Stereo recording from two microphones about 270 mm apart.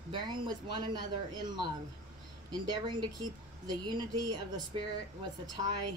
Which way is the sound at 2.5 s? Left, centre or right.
Centre.